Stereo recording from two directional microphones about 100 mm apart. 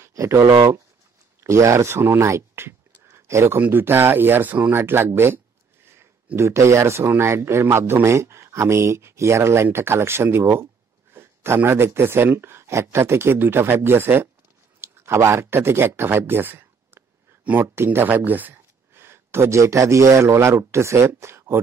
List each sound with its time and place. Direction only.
0.0 s speech: 30° right (ahead or behind)